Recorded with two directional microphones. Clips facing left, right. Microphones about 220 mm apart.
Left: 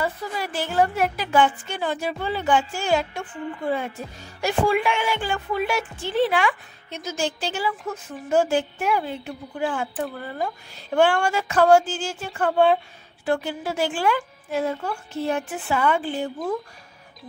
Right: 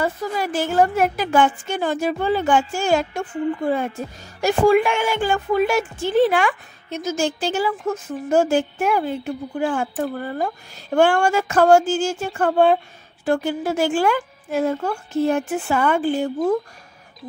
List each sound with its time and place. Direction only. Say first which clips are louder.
0.0 s a woman's voice: right 4 dB; 45° right (ahead or behind)